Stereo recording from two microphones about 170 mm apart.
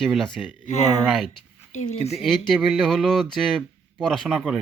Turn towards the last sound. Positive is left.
turn(degrees=-5)  # may be behind; listen again after turning